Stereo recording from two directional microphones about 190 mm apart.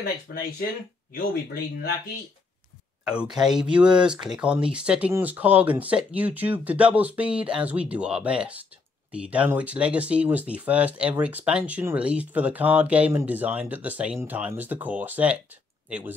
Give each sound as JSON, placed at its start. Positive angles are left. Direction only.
{"t": 0.3, "sound": "speech", "side_deg": 60}
{"t": 3.3, "sound": "speech", "side_deg": -5}